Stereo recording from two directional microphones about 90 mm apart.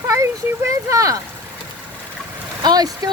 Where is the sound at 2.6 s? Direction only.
45° right (ahead or behind).